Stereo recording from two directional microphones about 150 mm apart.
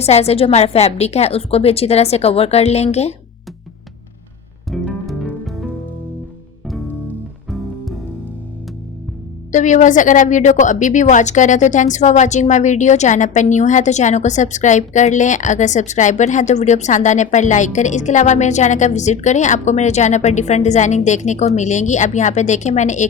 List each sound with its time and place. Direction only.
0.0 s speech: 45° left (ahead or behind)
4.7 s music: centre (ahead or behind)
7.5 s music: centre (ahead or behind)
9.5 s speech: 55° left (ahead or behind)